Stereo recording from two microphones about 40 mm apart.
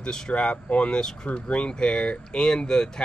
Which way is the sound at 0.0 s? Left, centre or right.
Centre.